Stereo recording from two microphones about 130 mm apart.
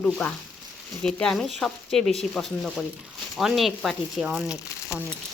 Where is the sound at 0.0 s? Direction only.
10° left (ahead or behind).